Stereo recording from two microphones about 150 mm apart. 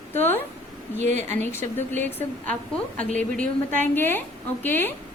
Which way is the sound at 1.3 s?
15° left (ahead or behind).